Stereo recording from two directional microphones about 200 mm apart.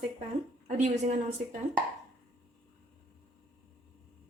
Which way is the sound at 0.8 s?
40° right (ahead or behind).